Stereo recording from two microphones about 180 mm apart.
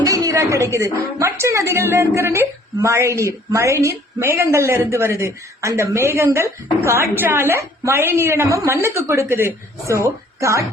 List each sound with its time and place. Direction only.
0.0 s a woman's voice: 20° right (ahead or behind)